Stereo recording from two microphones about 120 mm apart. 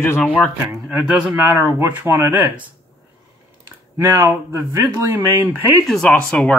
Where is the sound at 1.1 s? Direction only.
20° right (ahead or behind).